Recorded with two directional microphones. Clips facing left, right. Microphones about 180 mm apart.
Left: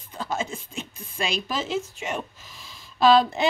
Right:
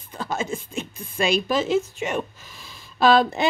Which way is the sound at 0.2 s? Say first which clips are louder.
Right 2 dB; 55° right (ahead or behind).